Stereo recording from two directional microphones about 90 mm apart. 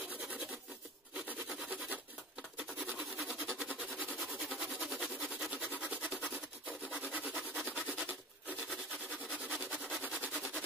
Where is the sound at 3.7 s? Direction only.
15° right (ahead or behind).